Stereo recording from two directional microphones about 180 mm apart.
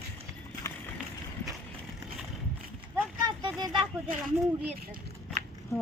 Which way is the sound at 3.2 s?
25° right (ahead or behind).